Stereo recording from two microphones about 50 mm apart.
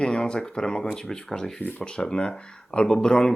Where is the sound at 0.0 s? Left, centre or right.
Centre.